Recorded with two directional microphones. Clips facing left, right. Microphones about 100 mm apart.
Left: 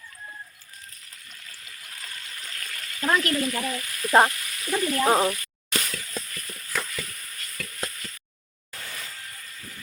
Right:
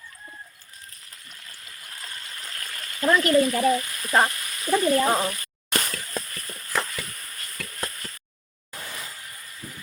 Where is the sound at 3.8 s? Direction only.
35° right (ahead or behind).